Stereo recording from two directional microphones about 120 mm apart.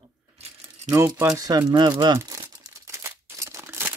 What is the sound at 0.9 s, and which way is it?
Speech, 20° right (ahead or behind).